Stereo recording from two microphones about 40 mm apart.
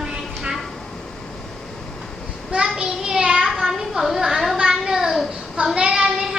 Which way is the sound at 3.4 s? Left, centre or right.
Centre.